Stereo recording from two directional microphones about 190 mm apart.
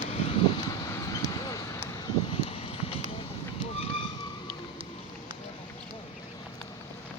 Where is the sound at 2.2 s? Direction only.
30° left (ahead or behind).